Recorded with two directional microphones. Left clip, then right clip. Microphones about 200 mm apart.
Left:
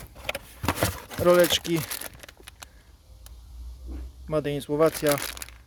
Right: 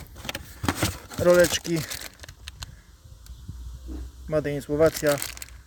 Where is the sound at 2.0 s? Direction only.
20° left (ahead or behind).